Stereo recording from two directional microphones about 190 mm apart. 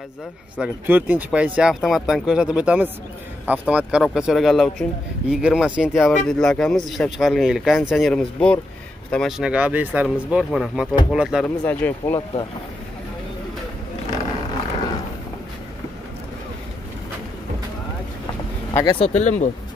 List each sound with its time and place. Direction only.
0.6 s speech: 10° right (ahead or behind)
11.6 s speech: 10° left (ahead or behind)
18.7 s speech: 20° left (ahead or behind)
18.9 s speech: 35° left (ahead or behind)